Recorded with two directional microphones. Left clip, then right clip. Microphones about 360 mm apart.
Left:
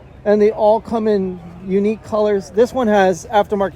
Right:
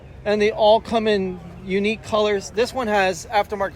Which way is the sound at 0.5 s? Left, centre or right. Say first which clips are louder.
Left 1 dB; centre.